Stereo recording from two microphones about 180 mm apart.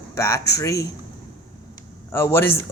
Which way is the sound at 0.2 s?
15° left (ahead or behind).